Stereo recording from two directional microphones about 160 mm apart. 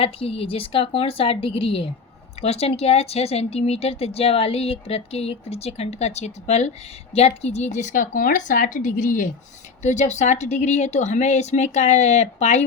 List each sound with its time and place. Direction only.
0.0 s speech: 35° left (ahead or behind)